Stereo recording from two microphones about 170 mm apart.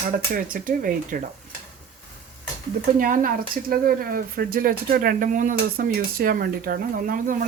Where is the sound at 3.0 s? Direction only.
55° right (ahead or behind).